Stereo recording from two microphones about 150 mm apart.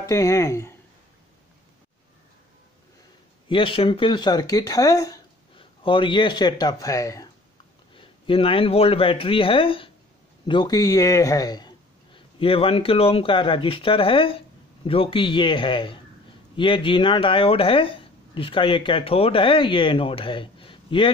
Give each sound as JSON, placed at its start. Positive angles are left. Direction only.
{"t": 0.0, "sound": "speech", "side_deg": 20}
{"t": 3.4, "sound": "speech", "side_deg": 35}
{"t": 5.6, "sound": "speech", "side_deg": 35}
{"t": 7.9, "sound": "a man's voice", "side_deg": 35}